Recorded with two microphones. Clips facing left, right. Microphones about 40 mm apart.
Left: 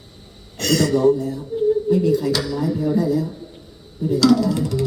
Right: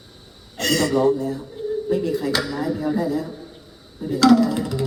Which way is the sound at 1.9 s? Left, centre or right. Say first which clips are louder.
Left 4 dB; centre.